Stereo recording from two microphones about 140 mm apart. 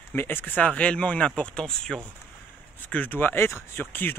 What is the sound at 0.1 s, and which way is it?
Speech, 15° left (ahead or behind).